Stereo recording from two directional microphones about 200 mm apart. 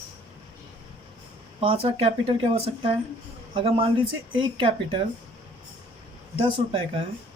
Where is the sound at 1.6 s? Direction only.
25° right (ahead or behind).